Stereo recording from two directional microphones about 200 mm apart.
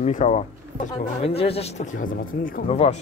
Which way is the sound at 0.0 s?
35° left (ahead or behind).